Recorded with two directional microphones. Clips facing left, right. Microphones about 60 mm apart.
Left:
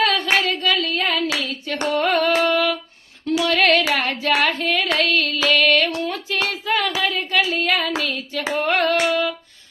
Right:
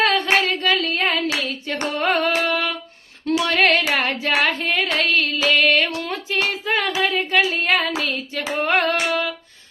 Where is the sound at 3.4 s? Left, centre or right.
Right.